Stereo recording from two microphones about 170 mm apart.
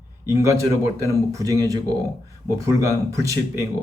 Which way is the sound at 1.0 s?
20° right (ahead or behind).